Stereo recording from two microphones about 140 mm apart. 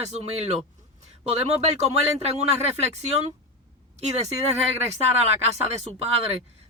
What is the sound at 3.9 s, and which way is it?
Speech, 50° right (ahead or behind).